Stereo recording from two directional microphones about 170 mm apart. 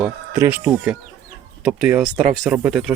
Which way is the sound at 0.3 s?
10° right (ahead or behind).